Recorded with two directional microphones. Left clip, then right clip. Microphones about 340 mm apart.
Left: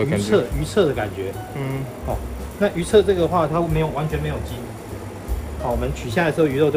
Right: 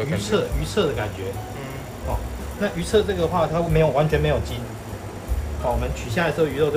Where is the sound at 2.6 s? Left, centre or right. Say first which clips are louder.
Left 4 dB; centre.